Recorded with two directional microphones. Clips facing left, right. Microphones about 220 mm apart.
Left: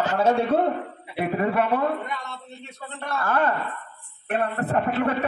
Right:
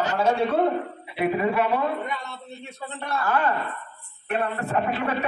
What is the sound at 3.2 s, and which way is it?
A man's voice, 50° left (ahead or behind).